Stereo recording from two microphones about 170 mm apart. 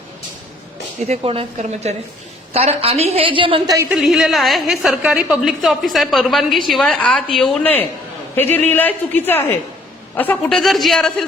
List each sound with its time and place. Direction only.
1.0 s a woman's voice: 35° right (ahead or behind)
3.8 s a woman's voice: 5° right (ahead or behind)